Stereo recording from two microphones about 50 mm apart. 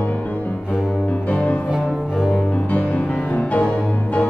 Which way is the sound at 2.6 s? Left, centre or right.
Left.